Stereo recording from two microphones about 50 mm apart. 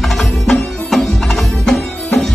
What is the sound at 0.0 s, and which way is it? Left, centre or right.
Music, centre.